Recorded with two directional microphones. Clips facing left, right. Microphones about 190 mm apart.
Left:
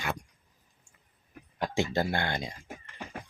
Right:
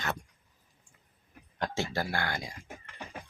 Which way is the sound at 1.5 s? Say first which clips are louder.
Left 4 dB; 10° left (ahead or behind).